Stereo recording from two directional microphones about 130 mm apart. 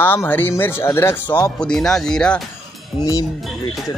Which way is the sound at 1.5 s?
5° left (ahead or behind).